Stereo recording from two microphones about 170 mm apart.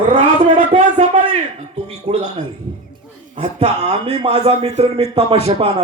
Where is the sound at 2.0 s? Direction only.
40° right (ahead or behind).